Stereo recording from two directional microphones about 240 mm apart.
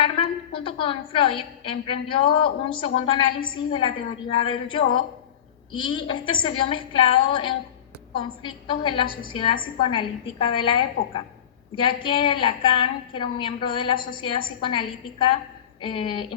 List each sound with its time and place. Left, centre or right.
0.0 s a woman's voice: left